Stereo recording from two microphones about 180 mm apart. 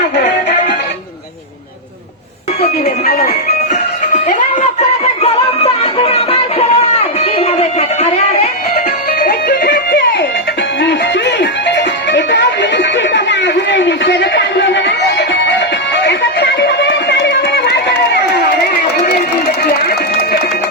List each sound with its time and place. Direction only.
2.6 s music: 35° left (ahead or behind)
3.1 s music: 60° left (ahead or behind)
3.7 s music: 40° left (ahead or behind)
9.1 s music: 60° left (ahead or behind)
19.6 s a sound: 60° left (ahead or behind)